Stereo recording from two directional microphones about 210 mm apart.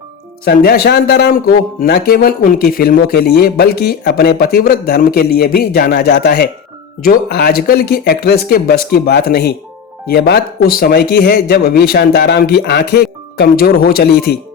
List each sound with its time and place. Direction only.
0.4 s speech: 45° left (ahead or behind)